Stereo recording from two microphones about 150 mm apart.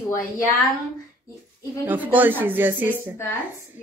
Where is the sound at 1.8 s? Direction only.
10° right (ahead or behind).